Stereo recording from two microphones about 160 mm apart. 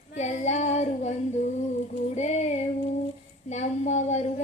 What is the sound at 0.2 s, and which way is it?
Child singing, 45° left (ahead or behind).